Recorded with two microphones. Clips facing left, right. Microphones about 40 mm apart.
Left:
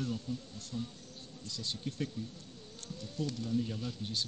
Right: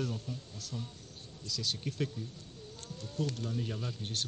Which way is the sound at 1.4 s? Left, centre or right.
Right.